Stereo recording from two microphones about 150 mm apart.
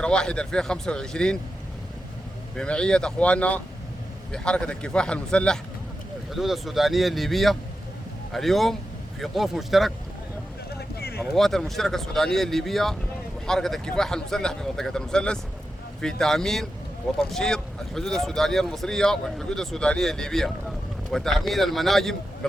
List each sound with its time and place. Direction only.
0.0 s speech: 5° left (ahead or behind)
2.6 s a man's voice: 5° left (ahead or behind)
10.8 s a sound: 90° left
11.3 s speech: centre (ahead or behind)